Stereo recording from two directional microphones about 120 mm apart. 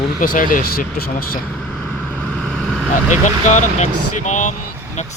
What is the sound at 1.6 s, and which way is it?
Vehicle, 5° left (ahead or behind).